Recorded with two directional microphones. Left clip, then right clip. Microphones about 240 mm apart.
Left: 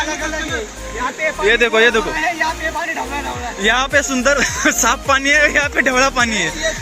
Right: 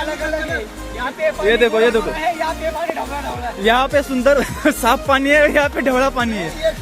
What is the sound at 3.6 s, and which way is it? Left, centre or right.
Speech, centre.